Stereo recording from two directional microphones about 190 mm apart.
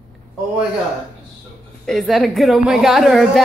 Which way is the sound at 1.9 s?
Centre (ahead or behind).